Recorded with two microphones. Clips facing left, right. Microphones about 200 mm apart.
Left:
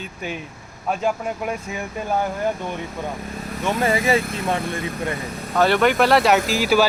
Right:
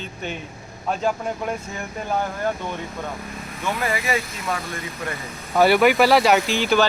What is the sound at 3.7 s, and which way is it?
Speech, 25° left (ahead or behind).